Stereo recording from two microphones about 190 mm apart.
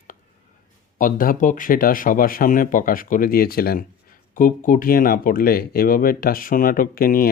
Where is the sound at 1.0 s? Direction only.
45° left (ahead or behind).